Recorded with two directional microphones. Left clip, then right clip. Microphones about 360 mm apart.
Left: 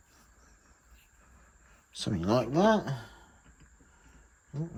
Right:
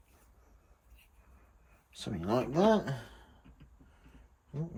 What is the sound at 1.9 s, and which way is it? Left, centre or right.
Speech, left.